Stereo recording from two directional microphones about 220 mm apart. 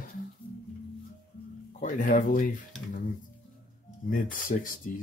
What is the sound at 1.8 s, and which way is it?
Speech, 35° left (ahead or behind).